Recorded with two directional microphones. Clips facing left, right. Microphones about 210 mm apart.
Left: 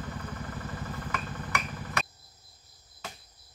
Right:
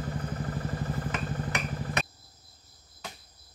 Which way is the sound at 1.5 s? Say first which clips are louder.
Right 2 dB; 35° right (ahead or behind).